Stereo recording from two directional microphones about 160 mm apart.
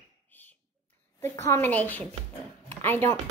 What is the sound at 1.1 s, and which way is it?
Speech, 15° left (ahead or behind).